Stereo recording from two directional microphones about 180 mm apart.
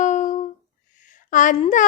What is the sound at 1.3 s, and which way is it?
Speech, 45° left (ahead or behind).